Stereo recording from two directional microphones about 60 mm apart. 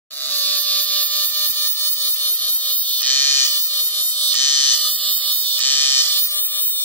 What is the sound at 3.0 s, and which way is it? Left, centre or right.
Fire alarm, left.